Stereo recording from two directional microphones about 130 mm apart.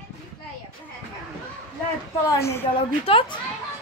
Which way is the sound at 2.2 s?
20° left (ahead or behind).